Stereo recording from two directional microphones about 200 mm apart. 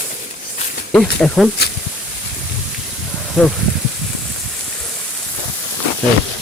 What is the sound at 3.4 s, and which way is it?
Speech, 5° right (ahead or behind).